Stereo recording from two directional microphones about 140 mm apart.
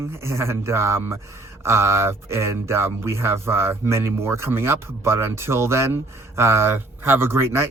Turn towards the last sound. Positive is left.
turn(degrees=-20)  # may be behind; listen again after turning